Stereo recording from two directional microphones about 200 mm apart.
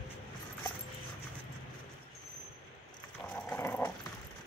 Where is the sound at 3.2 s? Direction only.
5° left (ahead or behind).